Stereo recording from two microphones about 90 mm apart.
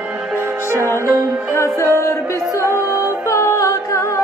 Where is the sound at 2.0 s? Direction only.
35° left (ahead or behind).